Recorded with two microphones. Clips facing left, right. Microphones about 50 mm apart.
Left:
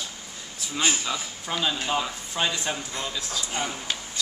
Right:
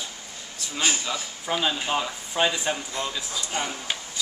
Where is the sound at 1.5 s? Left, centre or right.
Centre.